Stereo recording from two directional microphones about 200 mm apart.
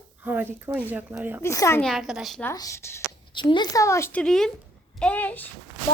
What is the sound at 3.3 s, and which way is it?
A woman's voice, 25° left (ahead or behind).